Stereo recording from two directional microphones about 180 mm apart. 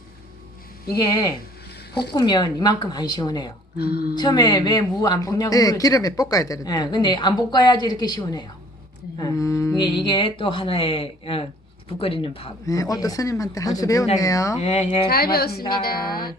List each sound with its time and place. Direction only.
0.9 s speech: 20° left (ahead or behind)
3.8 s a woman's voice: 60° left (ahead or behind)
4.1 s speech: 25° left (ahead or behind)
12.6 s speech: 20° left (ahead or behind)
14.6 s speech: 35° left (ahead or behind)
15.1 s a woman's voice: 60° left (ahead or behind)